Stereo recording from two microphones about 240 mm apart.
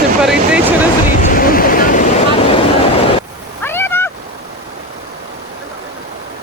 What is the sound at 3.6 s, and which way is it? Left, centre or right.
Cat, centre.